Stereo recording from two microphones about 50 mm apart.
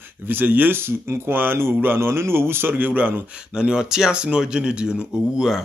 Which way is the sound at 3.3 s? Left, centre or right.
Centre.